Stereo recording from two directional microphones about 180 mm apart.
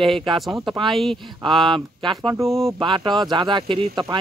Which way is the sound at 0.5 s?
20° right (ahead or behind).